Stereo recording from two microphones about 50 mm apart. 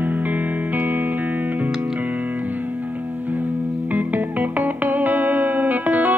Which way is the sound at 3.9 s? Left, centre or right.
Right.